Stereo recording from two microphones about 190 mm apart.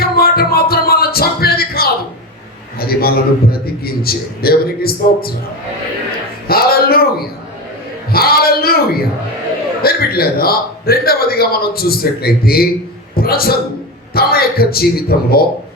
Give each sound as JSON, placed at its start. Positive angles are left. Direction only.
{"t": 0.0, "sound": "music", "side_deg": 55}
{"t": 2.7, "sound": "a man's voice", "side_deg": 55}
{"t": 6.5, "sound": "a sound", "side_deg": 55}
{"t": 8.1, "sound": "a man's voice", "side_deg": 55}